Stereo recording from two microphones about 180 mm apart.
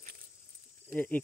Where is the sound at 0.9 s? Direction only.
10° left (ahead or behind).